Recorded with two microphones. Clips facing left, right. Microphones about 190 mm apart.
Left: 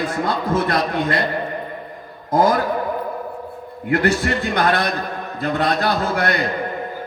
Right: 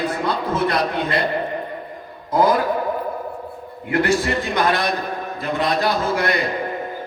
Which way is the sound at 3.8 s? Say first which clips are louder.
Left 1 dB; 60° left (ahead or behind).